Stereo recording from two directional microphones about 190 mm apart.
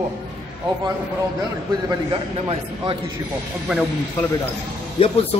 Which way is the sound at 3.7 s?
5° right (ahead or behind).